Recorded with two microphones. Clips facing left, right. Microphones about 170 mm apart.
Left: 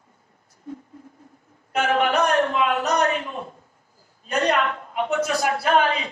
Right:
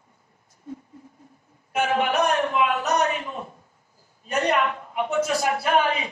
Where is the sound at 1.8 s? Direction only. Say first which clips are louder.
Left 1 dB; 60° left (ahead or behind).